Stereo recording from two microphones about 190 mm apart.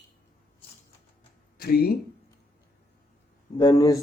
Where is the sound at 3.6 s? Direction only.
20° left (ahead or behind).